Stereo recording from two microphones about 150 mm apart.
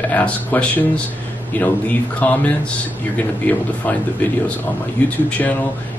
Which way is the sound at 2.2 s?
10° left (ahead or behind).